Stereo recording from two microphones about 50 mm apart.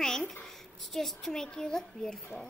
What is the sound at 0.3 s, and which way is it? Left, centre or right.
A child's voice, centre.